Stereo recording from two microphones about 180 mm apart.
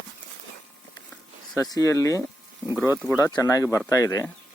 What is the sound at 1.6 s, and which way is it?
Speech, 20° left (ahead or behind).